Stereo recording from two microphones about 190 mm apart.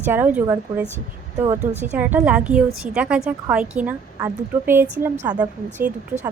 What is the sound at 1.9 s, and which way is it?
A woman's voice, 10° right (ahead or behind).